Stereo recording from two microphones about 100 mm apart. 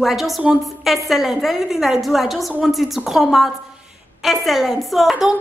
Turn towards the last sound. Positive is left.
turn(degrees=-5)  # may be behind; listen again after turning